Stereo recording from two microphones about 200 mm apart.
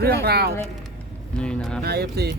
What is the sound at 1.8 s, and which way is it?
Speech, 55° right (ahead or behind).